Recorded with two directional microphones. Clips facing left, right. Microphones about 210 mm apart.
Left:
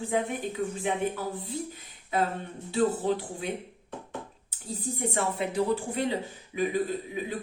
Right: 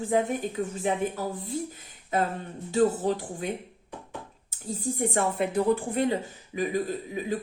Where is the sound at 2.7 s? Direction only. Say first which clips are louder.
Right 2 dB; 45° right (ahead or behind).